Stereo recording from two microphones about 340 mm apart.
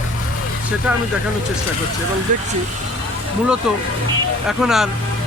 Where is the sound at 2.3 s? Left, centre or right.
Right.